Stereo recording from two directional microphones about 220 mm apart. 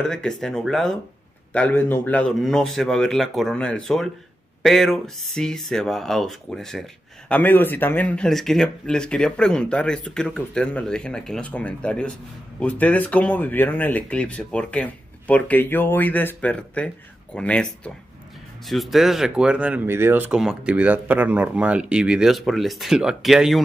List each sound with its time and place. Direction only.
0.1 s speech: centre (ahead or behind)